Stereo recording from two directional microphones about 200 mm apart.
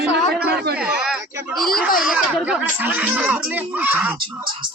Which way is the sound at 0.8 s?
5° right (ahead or behind).